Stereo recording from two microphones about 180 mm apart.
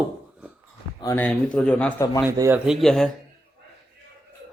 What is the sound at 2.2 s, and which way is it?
Speech, 15° right (ahead or behind).